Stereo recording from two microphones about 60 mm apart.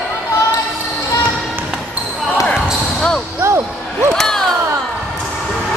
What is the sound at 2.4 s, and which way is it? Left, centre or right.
Basketball bounce, centre.